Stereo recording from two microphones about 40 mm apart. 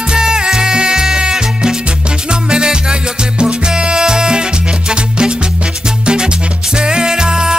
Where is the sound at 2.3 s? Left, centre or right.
Right.